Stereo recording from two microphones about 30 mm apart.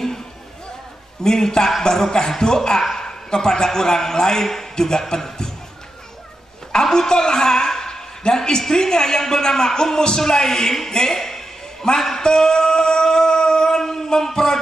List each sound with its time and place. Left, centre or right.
1.2 s a man's voice: centre
2.8 s a woman's voice: centre
3.1 s a man's voice: left
6.7 s a woman's voice: centre
10.9 s a sound: centre